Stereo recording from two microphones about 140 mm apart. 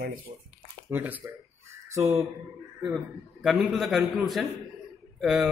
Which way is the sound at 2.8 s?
Centre (ahead or behind).